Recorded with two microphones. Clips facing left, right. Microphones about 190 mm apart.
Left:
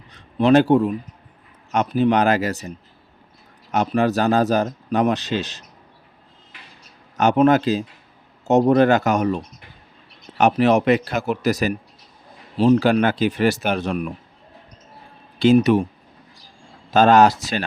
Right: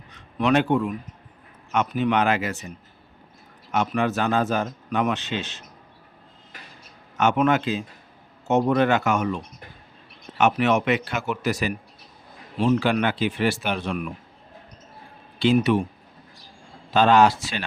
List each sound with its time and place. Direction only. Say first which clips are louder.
0.1 s speech: left 6 dB; 35° left (ahead or behind)
7.2 s speech: left 5 dB; 35° left (ahead or behind)
15.4 s speech: left 5 dB; 40° left (ahead or behind)
16.9 s speech: left 3 dB; 45° left (ahead or behind)